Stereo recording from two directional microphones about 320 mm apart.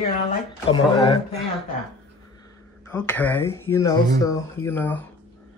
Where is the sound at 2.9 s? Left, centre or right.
Centre.